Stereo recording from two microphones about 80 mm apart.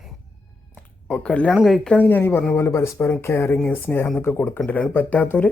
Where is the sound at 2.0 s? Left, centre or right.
Left.